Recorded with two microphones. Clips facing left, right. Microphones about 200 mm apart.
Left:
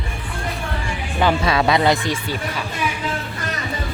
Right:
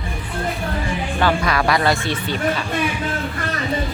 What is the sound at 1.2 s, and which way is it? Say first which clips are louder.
Speech: left 2 dB; 20° left (ahead or behind).